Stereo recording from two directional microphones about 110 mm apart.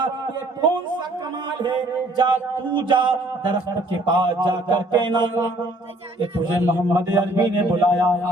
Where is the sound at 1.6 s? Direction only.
50° right (ahead or behind).